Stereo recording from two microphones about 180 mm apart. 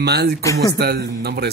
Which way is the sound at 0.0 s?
65° right (ahead or behind).